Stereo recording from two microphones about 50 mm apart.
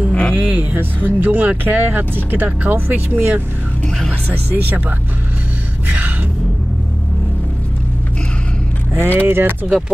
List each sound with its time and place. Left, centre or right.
0.1 s music: centre
0.4 s speech: right
5.9 s speech: right
8.9 s speech: right